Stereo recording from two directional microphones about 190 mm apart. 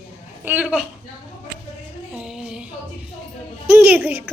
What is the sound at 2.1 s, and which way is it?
Music, 5° right (ahead or behind).